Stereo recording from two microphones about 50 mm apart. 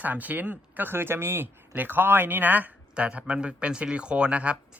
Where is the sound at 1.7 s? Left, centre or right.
Right.